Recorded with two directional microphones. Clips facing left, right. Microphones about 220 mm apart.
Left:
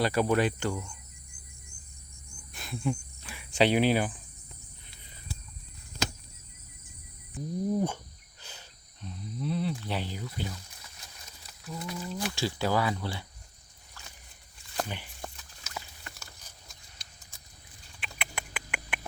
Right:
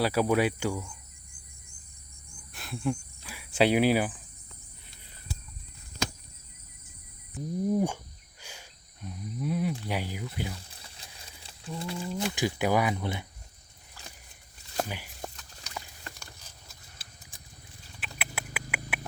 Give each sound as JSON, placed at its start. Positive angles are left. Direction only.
{"t": 0.0, "sound": "speech", "side_deg": -5}
{"t": 2.5, "sound": "cricket", "side_deg": 0}
{"t": 7.3, "sound": "speech", "side_deg": -10}
{"t": 8.4, "sound": "a sound", "side_deg": -10}
{"t": 9.8, "sound": "speech", "side_deg": -10}
{"t": 10.5, "sound": "a sound", "side_deg": -30}
{"t": 12.0, "sound": "speech", "side_deg": -15}
{"t": 14.8, "sound": "a sound", "side_deg": -10}
{"t": 15.4, "sound": "horse", "side_deg": 5}
{"t": 18.0, "sound": "rodents", "side_deg": -5}